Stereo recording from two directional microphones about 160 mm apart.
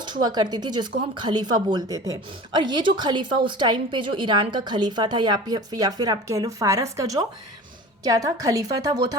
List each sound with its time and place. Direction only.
0.0 s a woman's voice: 25° right (ahead or behind)